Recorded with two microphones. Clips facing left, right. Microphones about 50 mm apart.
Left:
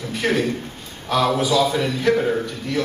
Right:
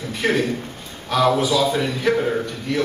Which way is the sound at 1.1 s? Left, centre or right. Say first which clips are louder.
Right 1 dB; centre.